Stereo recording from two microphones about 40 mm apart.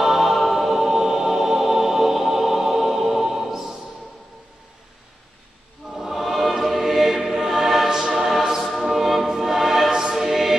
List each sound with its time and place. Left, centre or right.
0.0 s music: centre
5.9 s choir: centre